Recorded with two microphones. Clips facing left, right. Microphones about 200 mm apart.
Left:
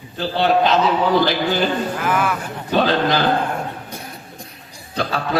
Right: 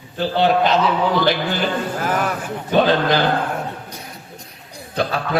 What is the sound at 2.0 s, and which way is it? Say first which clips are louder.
A man's voice: left 1 dB; 40° right (ahead or behind).